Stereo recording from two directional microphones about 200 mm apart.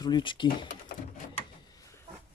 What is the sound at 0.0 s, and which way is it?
Speech, 25° left (ahead or behind).